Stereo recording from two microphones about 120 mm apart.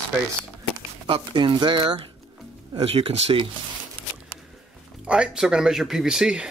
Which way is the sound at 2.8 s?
55° right (ahead or behind).